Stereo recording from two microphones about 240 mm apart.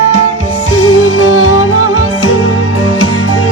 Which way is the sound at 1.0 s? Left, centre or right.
Left.